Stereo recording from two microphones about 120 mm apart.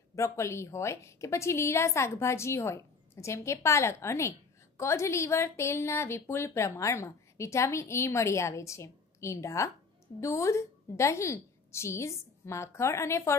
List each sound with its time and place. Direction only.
0.1 s a woman's voice: 25° left (ahead or behind)